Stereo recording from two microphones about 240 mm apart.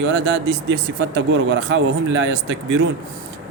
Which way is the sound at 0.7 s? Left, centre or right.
Right.